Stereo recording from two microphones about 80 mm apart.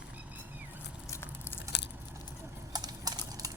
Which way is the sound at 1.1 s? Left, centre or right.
Left.